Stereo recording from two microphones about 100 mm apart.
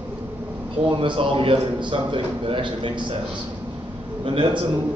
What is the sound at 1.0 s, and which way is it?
A man's voice, 60° right (ahead or behind).